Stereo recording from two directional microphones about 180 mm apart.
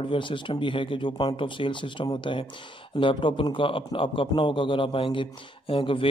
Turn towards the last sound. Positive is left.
turn(degrees=30)  # may be behind; listen again after turning